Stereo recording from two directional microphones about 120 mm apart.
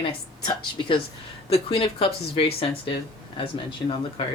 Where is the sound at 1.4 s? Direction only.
55° left (ahead or behind).